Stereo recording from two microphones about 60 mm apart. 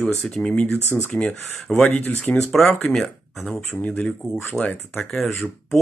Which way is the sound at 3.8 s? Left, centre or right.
Left.